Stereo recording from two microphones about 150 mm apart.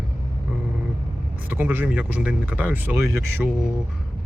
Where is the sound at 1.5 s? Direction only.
15° right (ahead or behind).